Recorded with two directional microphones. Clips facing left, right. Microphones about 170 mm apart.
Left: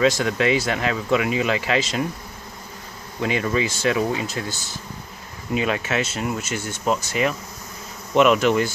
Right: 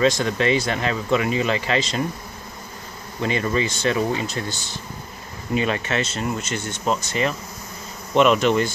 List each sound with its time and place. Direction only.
0.0 s speech: 5° left (ahead or behind)
3.2 s speech: 5° left (ahead or behind)